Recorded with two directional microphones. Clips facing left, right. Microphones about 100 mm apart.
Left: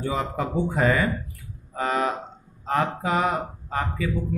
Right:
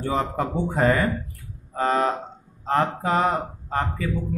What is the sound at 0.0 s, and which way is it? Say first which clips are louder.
A man's voice: right 2 dB; 40° right (ahead or behind).